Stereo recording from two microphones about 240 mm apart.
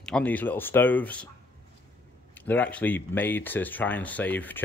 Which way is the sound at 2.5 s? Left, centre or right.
Centre.